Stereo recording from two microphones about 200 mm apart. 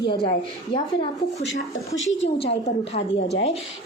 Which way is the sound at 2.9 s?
30° left (ahead or behind).